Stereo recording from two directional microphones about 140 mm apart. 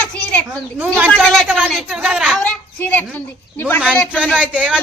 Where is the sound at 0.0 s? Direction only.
10° left (ahead or behind).